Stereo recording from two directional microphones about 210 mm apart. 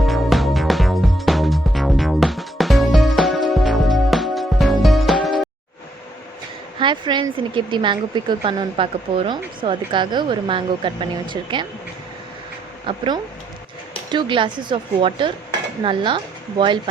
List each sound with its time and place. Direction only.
0.0 s music: centre (ahead or behind)
6.7 s a woman's voice: 20° right (ahead or behind)
12.9 s a woman's voice: 25° right (ahead or behind)
14.1 s a woman's voice: 25° right (ahead or behind)